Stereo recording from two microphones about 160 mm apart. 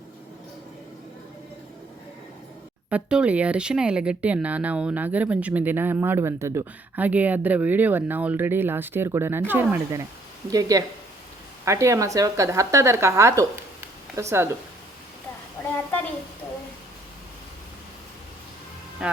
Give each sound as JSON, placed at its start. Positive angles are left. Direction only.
{"t": 2.9, "sound": "a woman's voice", "side_deg": -5}
{"t": 19.0, "sound": "speech", "side_deg": -5}